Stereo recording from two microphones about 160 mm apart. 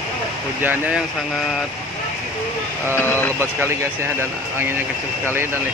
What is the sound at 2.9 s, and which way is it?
Speech, 15° left (ahead or behind).